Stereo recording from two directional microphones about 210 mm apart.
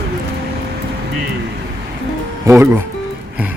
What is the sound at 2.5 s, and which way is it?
Speech, 10° right (ahead or behind).